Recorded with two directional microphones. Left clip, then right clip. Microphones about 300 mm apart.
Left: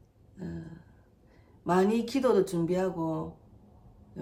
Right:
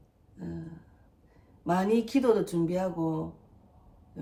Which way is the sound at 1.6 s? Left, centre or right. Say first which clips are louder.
Left 1 dB; centre.